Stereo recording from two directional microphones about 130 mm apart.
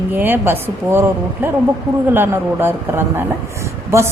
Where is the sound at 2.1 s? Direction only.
15° right (ahead or behind).